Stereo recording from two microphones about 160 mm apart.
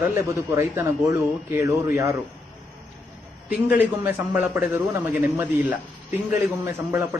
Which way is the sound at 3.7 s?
10° right (ahead or behind).